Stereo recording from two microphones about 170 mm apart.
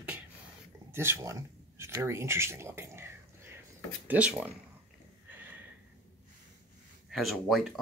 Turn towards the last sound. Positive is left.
turn(degrees=0)  # may be behind; listen again after turning